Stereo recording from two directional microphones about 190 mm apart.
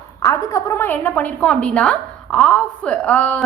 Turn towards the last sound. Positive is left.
turn(degrees=5)  # may be behind; listen again after turning